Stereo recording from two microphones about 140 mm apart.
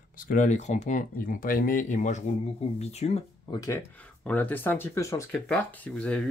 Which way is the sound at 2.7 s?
50° left (ahead or behind).